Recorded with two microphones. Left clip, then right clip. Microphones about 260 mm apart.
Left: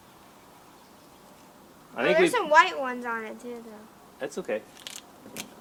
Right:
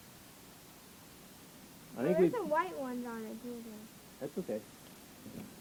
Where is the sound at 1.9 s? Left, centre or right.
Centre.